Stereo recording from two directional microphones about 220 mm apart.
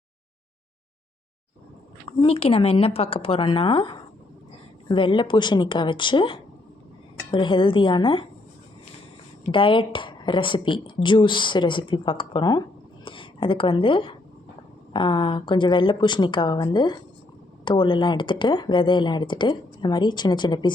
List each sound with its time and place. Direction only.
2.0 s speech: 25° left (ahead or behind)
9.5 s speech: 25° left (ahead or behind)